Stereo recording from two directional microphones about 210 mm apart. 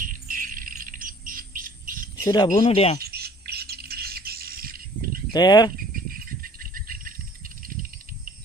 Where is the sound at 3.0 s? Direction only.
50° right (ahead or behind).